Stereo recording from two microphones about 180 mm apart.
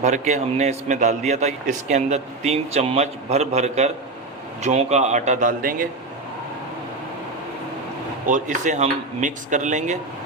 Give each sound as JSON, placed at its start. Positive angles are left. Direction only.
{"t": 0.0, "sound": "a man's voice", "side_deg": -40}
{"t": 8.3, "sound": "speech", "side_deg": -45}